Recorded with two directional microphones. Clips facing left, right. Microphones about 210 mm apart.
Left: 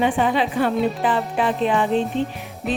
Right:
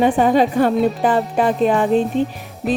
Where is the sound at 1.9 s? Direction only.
5° right (ahead or behind).